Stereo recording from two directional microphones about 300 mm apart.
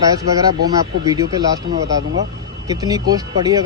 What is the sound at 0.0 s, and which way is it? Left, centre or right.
Speech, centre.